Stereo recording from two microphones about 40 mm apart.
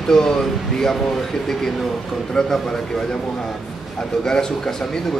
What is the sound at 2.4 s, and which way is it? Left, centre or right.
Speech, centre.